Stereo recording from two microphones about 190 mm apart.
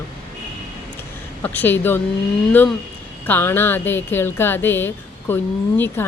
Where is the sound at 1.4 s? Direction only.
10° left (ahead or behind).